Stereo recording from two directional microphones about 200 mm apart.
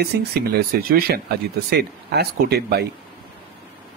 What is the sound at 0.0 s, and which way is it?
Speech, 50° right (ahead or behind).